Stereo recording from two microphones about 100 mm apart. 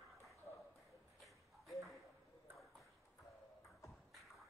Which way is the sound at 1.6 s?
Centre (ahead or behind).